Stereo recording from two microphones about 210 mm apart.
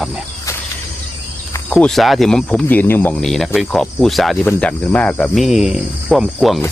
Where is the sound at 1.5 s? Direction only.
5° left (ahead or behind).